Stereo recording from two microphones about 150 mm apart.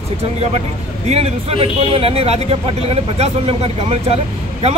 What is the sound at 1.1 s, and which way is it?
A man's voice, 45° right (ahead or behind).